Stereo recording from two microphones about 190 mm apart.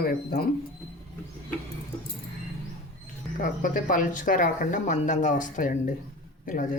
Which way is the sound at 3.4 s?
45° left (ahead or behind).